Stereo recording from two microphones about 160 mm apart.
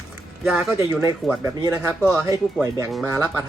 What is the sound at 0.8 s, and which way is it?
Speech, 20° right (ahead or behind).